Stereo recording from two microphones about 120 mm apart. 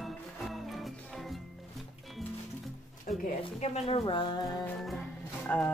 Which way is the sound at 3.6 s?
60° left (ahead or behind).